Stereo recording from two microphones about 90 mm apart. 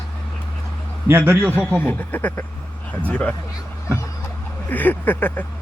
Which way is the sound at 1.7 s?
20° left (ahead or behind).